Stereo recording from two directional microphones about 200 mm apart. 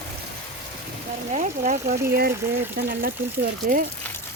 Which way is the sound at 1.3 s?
40° right (ahead or behind).